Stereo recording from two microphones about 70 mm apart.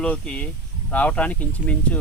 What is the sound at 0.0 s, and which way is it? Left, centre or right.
Speech, centre.